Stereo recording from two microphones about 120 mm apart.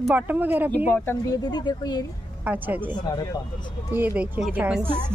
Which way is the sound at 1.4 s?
35° left (ahead or behind).